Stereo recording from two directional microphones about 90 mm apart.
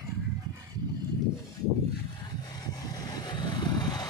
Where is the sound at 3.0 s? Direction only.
50° left (ahead or behind).